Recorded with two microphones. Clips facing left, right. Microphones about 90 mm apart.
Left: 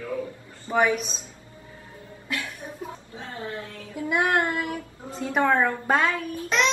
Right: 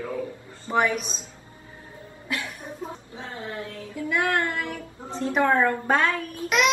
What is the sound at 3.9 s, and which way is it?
Child singing, 20° left (ahead or behind).